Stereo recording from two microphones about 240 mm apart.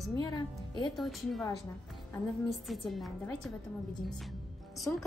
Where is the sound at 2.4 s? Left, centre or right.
Centre.